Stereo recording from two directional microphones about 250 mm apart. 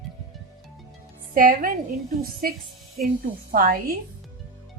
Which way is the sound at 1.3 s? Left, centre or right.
Right.